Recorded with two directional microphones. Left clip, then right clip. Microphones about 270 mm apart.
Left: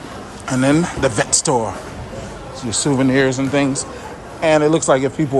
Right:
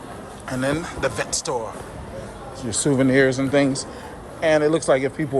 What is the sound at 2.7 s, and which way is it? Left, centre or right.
Speech, centre.